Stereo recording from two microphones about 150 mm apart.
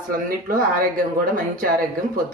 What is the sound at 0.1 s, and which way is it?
Speech, 70° right (ahead or behind).